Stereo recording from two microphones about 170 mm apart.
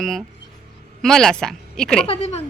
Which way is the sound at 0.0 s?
Centre (ahead or behind).